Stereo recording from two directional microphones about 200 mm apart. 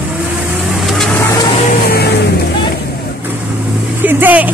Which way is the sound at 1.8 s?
50° left (ahead or behind).